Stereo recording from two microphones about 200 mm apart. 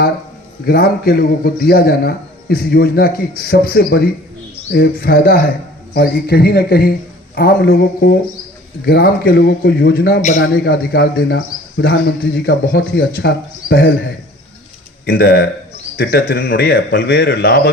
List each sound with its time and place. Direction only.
0.6 s a man's voice: 50° left (ahead or behind)
10.2 s a man's voice: 35° left (ahead or behind)
10.4 s a man's voice: 55° left (ahead or behind)